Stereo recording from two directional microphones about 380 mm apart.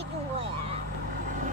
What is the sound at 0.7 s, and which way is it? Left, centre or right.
Vehicle, centre.